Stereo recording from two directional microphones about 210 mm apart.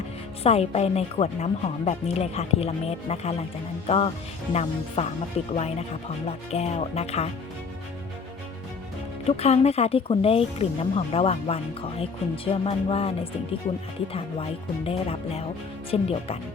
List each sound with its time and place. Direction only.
0.4 s speech: 30° left (ahead or behind)
9.2 s speech: 30° left (ahead or behind)
14.8 s speech: 30° left (ahead or behind)